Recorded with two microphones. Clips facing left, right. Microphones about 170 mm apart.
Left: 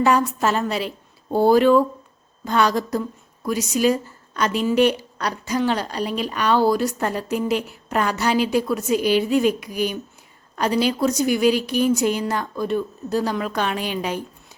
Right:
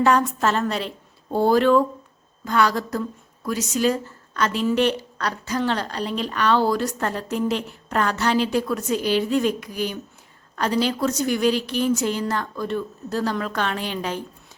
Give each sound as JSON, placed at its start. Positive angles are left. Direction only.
{"t": 0.0, "sound": "a woman's voice", "side_deg": 10}